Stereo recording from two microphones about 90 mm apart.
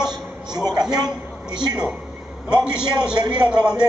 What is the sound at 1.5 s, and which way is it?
Speech, 55° right (ahead or behind).